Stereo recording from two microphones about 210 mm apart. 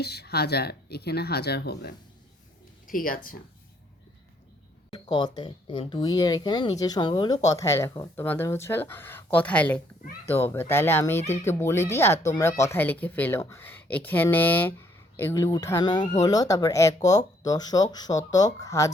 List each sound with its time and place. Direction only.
0.0 s speech: 50° left (ahead or behind)
4.9 s speech: 20° left (ahead or behind)